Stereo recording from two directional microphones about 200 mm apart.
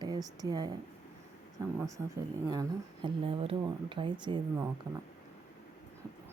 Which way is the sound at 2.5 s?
20° right (ahead or behind).